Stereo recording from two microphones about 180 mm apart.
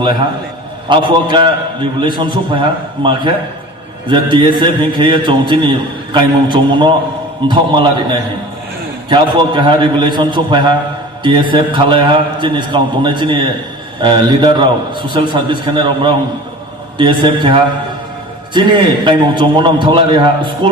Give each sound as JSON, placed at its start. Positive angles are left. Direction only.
{"t": 0.9, "sound": "a man's voice", "side_deg": -25}
{"t": 9.0, "sound": "a man's voice", "side_deg": -25}
{"t": 19.0, "sound": "a man's voice", "side_deg": -25}